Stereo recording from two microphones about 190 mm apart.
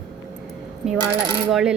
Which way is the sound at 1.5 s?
Centre (ahead or behind).